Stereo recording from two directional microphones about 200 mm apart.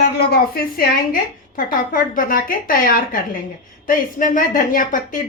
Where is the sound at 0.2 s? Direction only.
50° left (ahead or behind).